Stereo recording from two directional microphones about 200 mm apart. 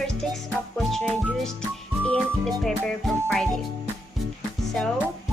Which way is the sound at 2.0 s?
5° left (ahead or behind).